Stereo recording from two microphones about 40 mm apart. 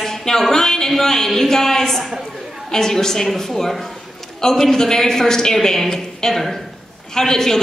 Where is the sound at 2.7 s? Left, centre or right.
Centre.